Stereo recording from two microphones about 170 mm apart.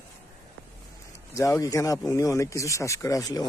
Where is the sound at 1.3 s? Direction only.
20° left (ahead or behind).